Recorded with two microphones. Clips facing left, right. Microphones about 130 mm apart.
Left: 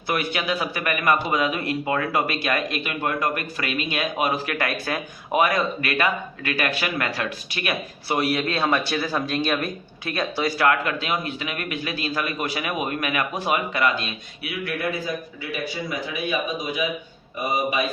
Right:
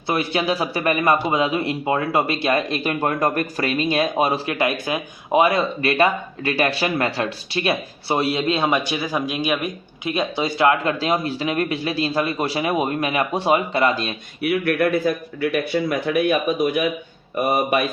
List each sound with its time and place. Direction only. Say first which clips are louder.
0.1 s a man's voice: right 4 dB; 30° right (ahead or behind)
14.4 s speech: right 9 dB; 60° right (ahead or behind)